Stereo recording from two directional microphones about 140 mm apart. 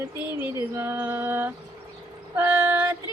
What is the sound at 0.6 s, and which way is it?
Speech, 15° right (ahead or behind).